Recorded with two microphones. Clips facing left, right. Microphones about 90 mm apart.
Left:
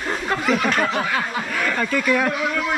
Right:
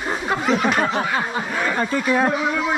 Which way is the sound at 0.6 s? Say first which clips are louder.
Right 1 dB; 15° right (ahead or behind).